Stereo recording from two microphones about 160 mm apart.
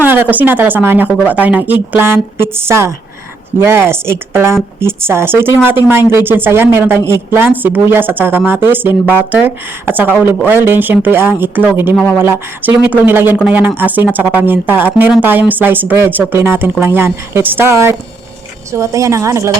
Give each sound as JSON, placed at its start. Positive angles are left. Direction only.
{"t": 0.0, "sound": "speech", "side_deg": -10}